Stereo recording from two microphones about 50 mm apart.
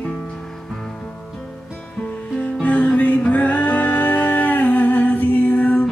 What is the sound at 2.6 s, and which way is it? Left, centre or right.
Music, left.